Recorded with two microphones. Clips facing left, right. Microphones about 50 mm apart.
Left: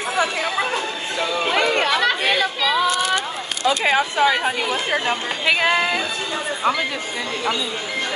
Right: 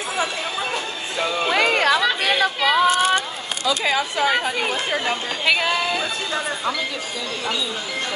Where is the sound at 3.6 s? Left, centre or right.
Left.